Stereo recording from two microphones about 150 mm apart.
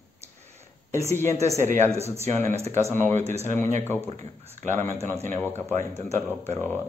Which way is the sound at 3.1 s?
50° right (ahead or behind).